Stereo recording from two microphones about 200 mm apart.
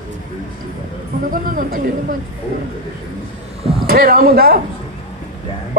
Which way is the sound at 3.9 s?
45° right (ahead or behind).